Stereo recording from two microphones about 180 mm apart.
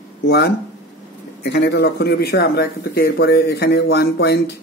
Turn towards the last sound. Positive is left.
turn(degrees=65)  # may be behind; listen again after turning